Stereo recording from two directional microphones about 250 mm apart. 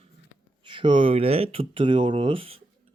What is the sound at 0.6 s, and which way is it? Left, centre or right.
Speech, centre.